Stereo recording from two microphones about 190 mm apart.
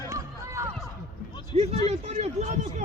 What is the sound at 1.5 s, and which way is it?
Speech, 35° right (ahead or behind).